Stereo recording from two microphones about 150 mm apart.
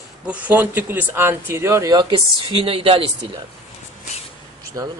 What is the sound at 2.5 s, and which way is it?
Speech, 35° right (ahead or behind).